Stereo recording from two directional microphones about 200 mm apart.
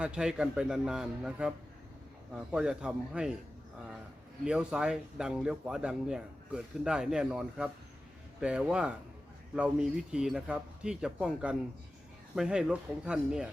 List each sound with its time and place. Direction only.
0.0 s speech: 5° right (ahead or behind)
4.4 s speech: 5° right (ahead or behind)